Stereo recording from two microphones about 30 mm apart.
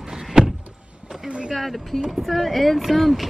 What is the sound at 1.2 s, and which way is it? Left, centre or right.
Vehicle, right.